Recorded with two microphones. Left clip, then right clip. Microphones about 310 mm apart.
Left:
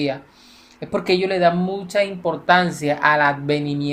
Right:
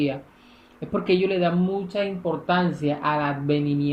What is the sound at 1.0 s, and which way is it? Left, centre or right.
Speech, centre.